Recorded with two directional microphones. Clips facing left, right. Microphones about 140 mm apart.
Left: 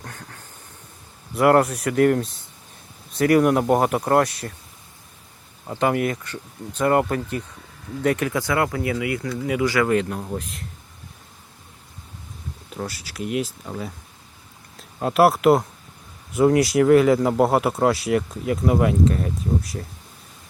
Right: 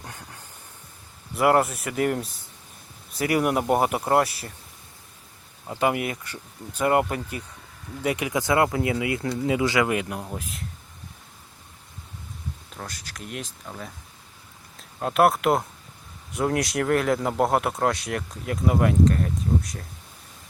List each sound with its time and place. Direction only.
0.0 s vehicle: 10° right (ahead or behind)
1.4 s speech: centre (ahead or behind)
5.6 s speech: 5° right (ahead or behind)
12.7 s speech: 5° left (ahead or behind)